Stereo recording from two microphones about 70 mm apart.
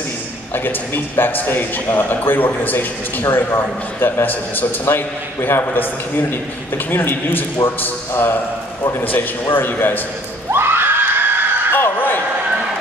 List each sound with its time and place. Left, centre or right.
0.7 s speech: left
10.5 s screaming: right
11.7 s a sound: left